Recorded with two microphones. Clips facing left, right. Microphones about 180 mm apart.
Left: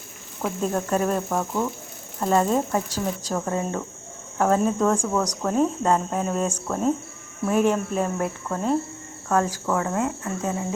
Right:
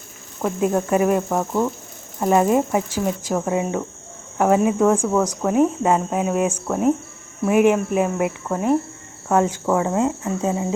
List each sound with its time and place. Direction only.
0.6 s speech: 10° right (ahead or behind)